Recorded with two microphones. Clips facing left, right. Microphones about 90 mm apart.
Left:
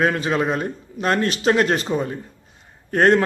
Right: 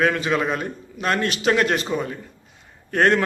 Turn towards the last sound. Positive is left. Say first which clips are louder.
# left 3 dB
turn(degrees=35)  # may be behind; listen again after turning